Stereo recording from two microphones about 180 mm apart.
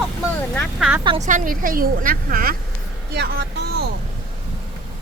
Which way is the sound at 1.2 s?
45° right (ahead or behind).